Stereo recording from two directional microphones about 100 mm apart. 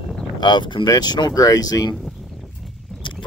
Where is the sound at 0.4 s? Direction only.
50° left (ahead or behind).